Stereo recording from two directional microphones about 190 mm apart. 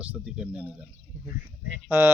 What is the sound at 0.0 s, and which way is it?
Speech, 5° right (ahead or behind).